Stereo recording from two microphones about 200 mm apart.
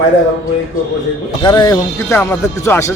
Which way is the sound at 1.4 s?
20° left (ahead or behind).